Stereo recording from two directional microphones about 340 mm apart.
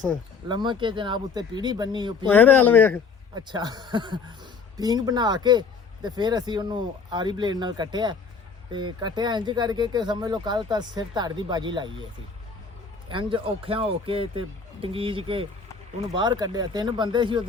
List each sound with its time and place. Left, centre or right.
0.6 s speech: centre
2.3 s speech: centre
3.3 s speech: centre
13.1 s speech: centre